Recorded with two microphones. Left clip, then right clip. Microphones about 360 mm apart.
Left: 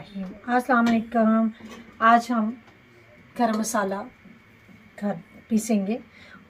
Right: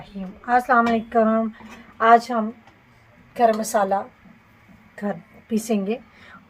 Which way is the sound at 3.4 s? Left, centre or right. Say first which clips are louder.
Right 6 dB; right.